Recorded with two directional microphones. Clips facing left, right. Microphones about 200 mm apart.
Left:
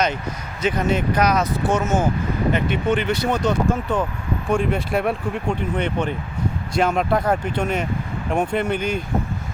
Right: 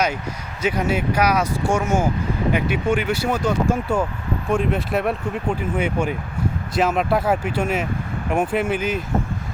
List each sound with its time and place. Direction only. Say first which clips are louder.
0.6 s speech: left 1 dB; 10° right (ahead or behind)